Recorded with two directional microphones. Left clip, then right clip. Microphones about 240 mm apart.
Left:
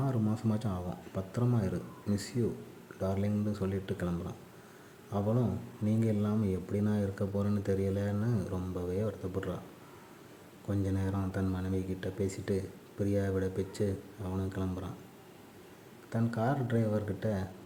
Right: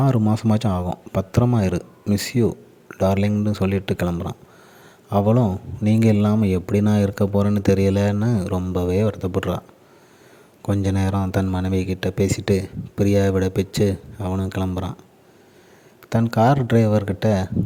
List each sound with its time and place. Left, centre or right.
0.0 s speech: right
10.7 s speech: right
16.0 s speech: right